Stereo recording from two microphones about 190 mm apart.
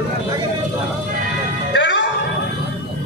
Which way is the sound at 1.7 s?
70° left (ahead or behind).